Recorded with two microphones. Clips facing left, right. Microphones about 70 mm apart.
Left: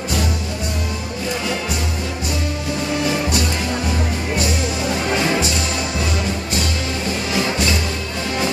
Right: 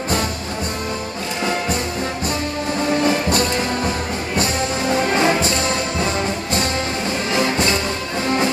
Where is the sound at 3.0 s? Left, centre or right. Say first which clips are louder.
Right 2 dB; right.